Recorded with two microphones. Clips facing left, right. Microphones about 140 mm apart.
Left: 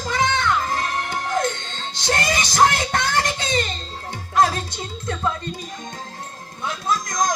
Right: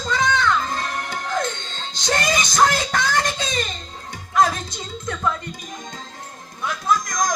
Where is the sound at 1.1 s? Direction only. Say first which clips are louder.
Left 2 dB; 25° left (ahead or behind).